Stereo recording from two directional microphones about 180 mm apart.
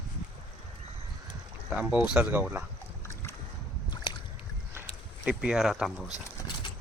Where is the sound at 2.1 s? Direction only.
10° right (ahead or behind).